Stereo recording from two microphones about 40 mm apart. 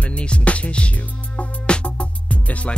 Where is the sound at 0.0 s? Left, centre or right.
Left.